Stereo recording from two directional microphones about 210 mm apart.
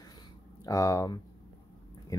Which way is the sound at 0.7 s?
15° left (ahead or behind).